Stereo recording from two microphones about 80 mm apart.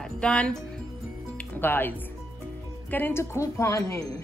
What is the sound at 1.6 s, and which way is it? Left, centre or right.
Speech, left.